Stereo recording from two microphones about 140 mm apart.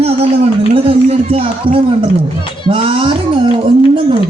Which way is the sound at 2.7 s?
40° right (ahead or behind).